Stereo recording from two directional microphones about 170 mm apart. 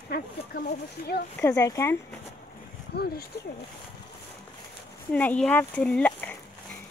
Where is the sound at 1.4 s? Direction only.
20° left (ahead or behind).